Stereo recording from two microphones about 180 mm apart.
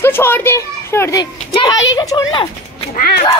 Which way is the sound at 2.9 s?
60° left (ahead or behind).